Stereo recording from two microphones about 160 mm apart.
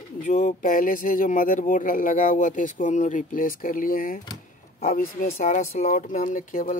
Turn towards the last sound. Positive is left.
turn(degrees=55)  # may be behind; listen again after turning